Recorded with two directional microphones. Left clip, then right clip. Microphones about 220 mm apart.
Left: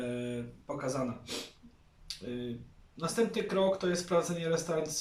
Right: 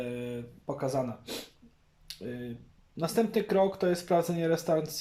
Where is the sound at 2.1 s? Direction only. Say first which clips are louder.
Left 1 dB; 40° right (ahead or behind).